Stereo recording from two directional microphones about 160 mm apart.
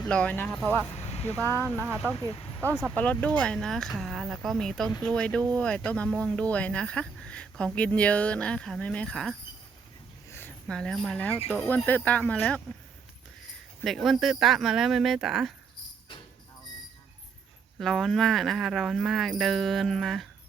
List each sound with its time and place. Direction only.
0.1 s speech: 10° left (ahead or behind)
0.9 s a sound: 40° left (ahead or behind)
1.4 s speech: 15° left (ahead or behind)
1.8 s speech: 10° right (ahead or behind)
2.9 s speech: 10° left (ahead or behind)
10.3 s speech: 10° left (ahead or behind)
13.8 s speech: centre (ahead or behind)
17.7 s speech: centre (ahead or behind)